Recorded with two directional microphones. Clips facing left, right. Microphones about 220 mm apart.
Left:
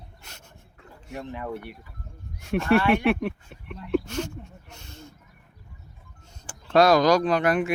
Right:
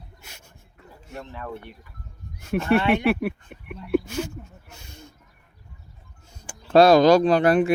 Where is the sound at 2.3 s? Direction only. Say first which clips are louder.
Even; centre (ahead or behind).